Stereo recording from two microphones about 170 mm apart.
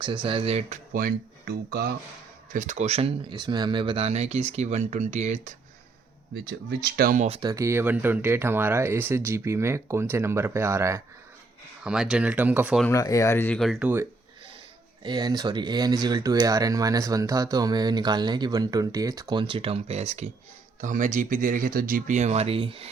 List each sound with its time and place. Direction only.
0.0 s speech: 30° right (ahead or behind)
0.9 s speech: 60° right (ahead or behind)
2.5 s speech: 50° right (ahead or behind)
6.8 s speech: 60° right (ahead or behind)
7.3 s speech: 30° right (ahead or behind)
7.5 s speech: 15° right (ahead or behind)
11.8 s speech: 5° right (ahead or behind)
12.9 s speech: 20° left (ahead or behind); by 14.1 s 10° right (ahead or behind)
15.0 s speech: 25° right (ahead or behind)